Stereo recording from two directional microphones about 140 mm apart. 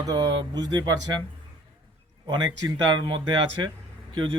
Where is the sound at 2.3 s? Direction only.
30° right (ahead or behind).